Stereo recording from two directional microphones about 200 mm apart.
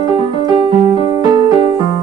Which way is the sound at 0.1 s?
25° right (ahead or behind).